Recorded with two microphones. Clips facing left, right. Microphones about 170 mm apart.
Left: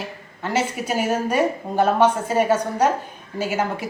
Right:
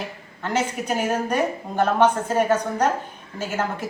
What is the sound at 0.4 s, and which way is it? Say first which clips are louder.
A woman's voice: left 1 dB; 5° left (ahead or behind).